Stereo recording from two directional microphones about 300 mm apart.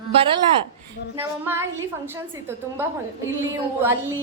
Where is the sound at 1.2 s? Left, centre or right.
Centre.